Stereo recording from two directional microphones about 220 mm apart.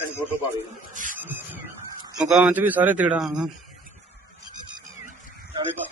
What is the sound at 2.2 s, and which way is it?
A man's voice, centre (ahead or behind).